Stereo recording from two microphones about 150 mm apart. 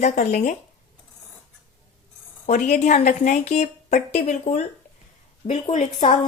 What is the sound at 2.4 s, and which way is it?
Speech, 50° left (ahead or behind).